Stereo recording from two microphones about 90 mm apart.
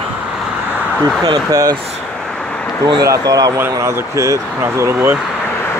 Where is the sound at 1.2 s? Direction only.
45° right (ahead or behind).